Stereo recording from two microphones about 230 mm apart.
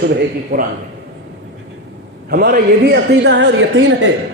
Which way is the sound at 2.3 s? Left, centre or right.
Right.